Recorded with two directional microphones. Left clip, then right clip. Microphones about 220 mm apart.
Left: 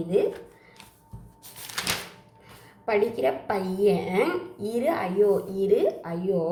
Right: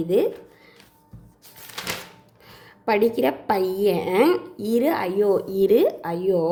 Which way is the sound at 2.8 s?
50° right (ahead or behind).